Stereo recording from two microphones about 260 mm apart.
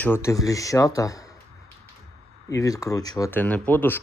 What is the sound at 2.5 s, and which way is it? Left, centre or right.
Speech, centre.